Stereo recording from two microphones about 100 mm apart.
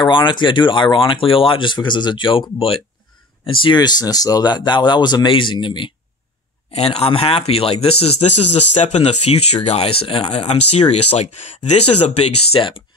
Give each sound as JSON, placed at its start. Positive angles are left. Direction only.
{"t": 0.1, "sound": "speech", "side_deg": 50}
{"t": 6.7, "sound": "speech", "side_deg": 90}
{"t": 10.3, "sound": "speech", "side_deg": 90}